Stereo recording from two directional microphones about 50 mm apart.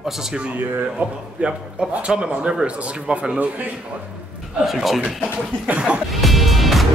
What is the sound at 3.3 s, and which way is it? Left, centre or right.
Speech, right.